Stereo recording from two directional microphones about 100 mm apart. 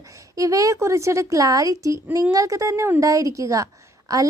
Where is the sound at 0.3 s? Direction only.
35° right (ahead or behind).